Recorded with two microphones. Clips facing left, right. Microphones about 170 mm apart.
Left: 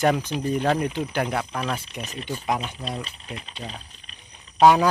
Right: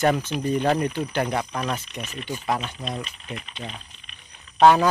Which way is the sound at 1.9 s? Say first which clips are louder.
Even; 35° left (ahead or behind).